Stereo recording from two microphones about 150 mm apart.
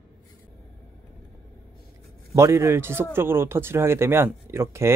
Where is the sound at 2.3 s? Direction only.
20° right (ahead or behind).